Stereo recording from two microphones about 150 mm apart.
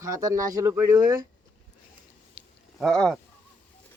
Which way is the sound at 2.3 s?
Centre (ahead or behind).